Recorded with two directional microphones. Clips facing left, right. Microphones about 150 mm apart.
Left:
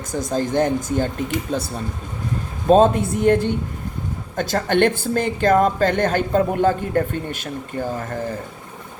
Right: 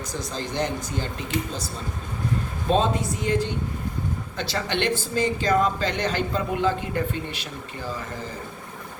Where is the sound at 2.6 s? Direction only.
50° left (ahead or behind).